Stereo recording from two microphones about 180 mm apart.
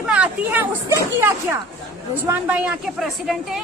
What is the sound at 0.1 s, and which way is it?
A woman's voice, 10° right (ahead or behind).